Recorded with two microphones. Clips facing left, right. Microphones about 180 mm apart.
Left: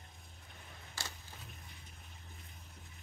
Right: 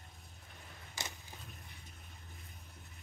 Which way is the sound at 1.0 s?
20° right (ahead or behind).